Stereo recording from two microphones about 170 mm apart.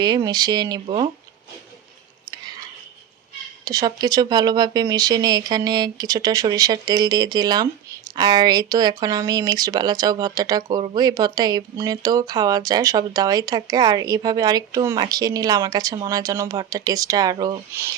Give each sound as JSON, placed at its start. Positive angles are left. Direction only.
{"t": 0.0, "sound": "speech", "side_deg": -25}
{"t": 3.6, "sound": "speech", "side_deg": -20}